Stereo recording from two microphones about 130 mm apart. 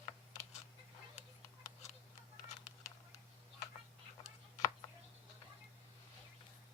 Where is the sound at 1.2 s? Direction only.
60° left (ahead or behind).